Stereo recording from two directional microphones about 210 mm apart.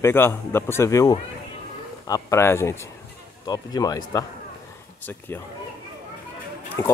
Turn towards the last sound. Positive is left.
turn(degrees=15)  # may be behind; listen again after turning